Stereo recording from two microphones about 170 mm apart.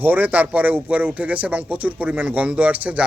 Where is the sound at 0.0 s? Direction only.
10° right (ahead or behind).